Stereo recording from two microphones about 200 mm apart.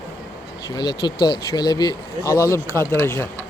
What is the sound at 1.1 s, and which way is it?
Speech, 50° left (ahead or behind).